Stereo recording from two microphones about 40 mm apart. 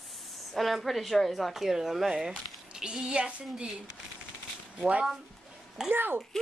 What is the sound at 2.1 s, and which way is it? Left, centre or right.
Speech, right.